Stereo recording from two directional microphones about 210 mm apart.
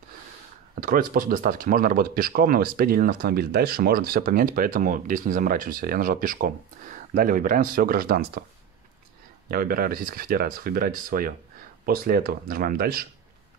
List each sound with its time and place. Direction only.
0.7 s speech: 40° right (ahead or behind)
9.5 s speech: 45° right (ahead or behind)